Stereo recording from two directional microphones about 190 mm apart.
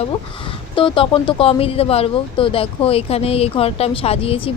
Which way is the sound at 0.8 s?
25° left (ahead or behind).